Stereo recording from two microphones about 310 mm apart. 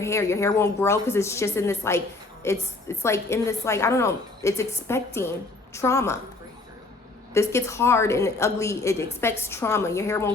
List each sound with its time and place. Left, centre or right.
0.0 s a woman's voice: centre
7.3 s a woman's voice: centre